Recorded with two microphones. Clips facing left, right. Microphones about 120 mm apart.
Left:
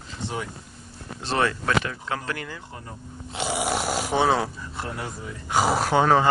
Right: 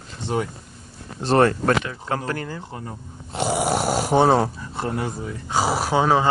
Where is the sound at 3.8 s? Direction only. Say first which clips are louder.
Right 6 dB; 45° right (ahead or behind).